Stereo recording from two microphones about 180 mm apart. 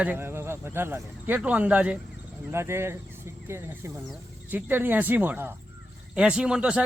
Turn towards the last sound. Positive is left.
turn(degrees=-5)  # may be behind; listen again after turning